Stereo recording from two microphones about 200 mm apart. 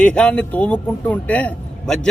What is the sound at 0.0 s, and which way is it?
A man's voice, 5° left (ahead or behind).